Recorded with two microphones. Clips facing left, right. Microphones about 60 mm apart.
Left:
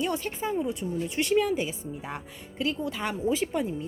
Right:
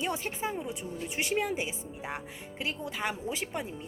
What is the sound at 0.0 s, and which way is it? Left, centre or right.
A woman's voice, centre.